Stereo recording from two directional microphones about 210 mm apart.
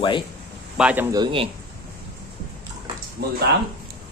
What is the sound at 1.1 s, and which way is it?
Speech, 25° right (ahead or behind).